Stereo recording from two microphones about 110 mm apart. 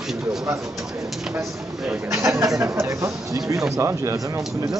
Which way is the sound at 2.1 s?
30° right (ahead or behind).